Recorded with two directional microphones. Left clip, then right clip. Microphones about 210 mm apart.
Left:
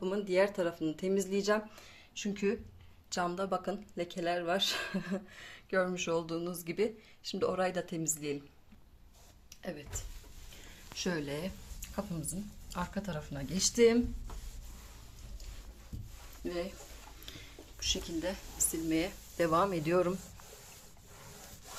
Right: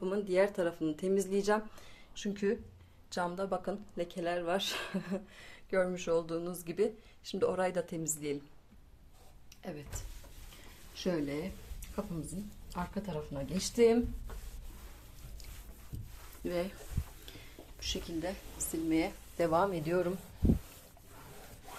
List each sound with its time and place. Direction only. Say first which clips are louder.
0.0 s speech: even; 5° left (ahead or behind)
10.9 s speech: right 1 dB; centre (ahead or behind)
16.4 s speech: right 2 dB; 15° right (ahead or behind)
17.2 s speech: left 2 dB; centre (ahead or behind)